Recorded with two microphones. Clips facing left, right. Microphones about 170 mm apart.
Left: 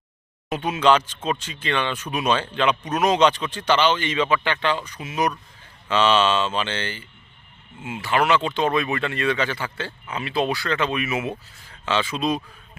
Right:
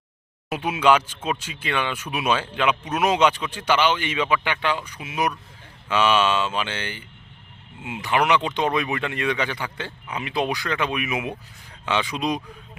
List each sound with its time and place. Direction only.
0.5 s speech: 10° right (ahead or behind)